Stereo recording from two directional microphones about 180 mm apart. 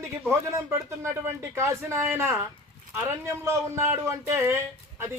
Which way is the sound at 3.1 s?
15° right (ahead or behind).